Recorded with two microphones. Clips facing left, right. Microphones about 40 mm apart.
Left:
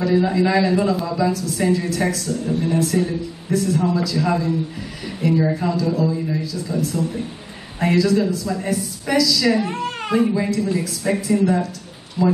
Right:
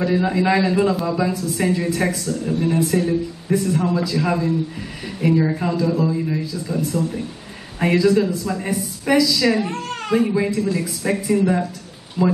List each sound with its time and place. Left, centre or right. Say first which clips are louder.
0.0 s a woman's voice: left 1 dB; centre
5.8 s a woman's voice: right 1 dB; centre
9.7 s a sound: left 1 dB; centre
10.2 s a woman's voice: even; centre
12.2 s speech: even; right